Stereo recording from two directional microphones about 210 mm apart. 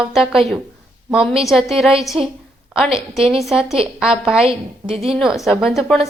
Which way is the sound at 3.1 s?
Centre (ahead or behind).